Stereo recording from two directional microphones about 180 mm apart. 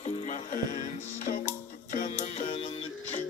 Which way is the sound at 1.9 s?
45° left (ahead or behind).